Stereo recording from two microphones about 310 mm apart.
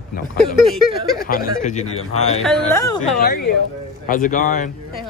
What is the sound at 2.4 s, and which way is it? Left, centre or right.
Speech, centre.